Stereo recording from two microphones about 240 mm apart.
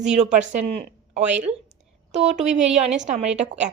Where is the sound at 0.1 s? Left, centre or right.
Right.